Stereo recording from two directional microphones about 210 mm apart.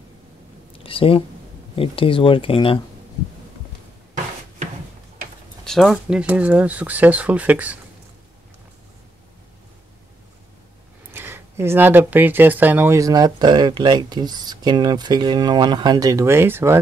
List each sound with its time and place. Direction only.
0.7 s a sound: 25° left (ahead or behind)
1.8 s speech: 25° left (ahead or behind)
5.6 s speech: centre (ahead or behind)
11.1 s speech: 10° right (ahead or behind)